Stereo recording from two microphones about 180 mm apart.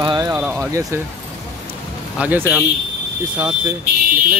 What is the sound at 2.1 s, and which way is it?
Speech, 10° right (ahead or behind).